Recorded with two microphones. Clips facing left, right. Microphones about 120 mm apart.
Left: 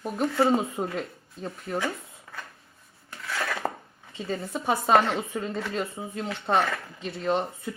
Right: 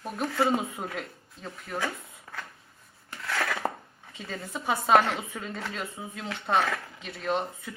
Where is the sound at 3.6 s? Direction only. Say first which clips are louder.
Left 1 dB; centre (ahead or behind).